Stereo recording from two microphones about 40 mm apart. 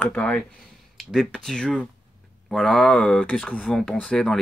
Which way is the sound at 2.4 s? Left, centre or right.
Centre.